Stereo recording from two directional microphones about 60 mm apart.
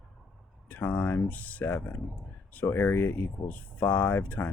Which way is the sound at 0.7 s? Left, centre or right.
Left.